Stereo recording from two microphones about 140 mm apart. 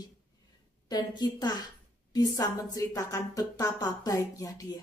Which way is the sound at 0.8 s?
30° left (ahead or behind).